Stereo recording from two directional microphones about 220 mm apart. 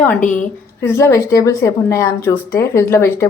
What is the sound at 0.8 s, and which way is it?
A woman's voice, 10° left (ahead or behind).